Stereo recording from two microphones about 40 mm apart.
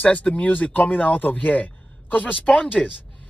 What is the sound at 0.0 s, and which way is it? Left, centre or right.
Speech, left.